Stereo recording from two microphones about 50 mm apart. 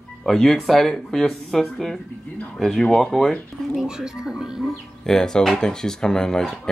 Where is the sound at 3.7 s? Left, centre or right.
Centre.